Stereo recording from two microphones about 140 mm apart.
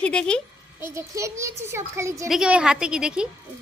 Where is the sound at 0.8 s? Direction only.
20° right (ahead or behind).